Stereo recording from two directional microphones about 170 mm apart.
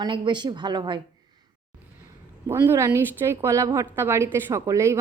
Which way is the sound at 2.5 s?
15° right (ahead or behind).